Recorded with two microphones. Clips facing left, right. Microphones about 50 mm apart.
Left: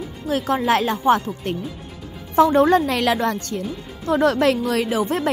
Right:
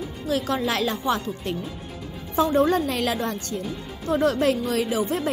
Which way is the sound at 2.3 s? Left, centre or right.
Left.